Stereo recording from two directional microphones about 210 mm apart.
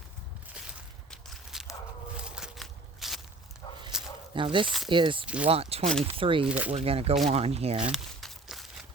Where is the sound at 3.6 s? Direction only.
20° left (ahead or behind).